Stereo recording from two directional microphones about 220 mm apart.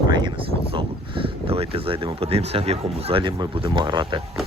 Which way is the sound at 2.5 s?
25° right (ahead or behind).